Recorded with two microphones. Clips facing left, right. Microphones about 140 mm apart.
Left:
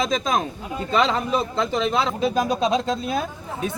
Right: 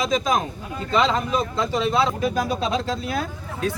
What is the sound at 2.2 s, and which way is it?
Speech, 20° left (ahead or behind).